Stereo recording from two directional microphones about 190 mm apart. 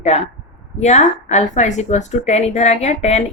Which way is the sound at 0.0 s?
35° left (ahead or behind).